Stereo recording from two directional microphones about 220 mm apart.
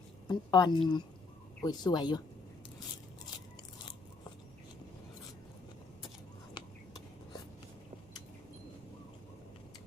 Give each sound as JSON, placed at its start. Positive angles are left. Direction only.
{"t": 0.3, "sound": "a woman's voice", "side_deg": 20}